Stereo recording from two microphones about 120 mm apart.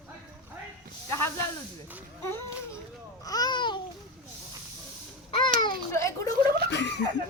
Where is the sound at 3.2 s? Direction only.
30° left (ahead or behind).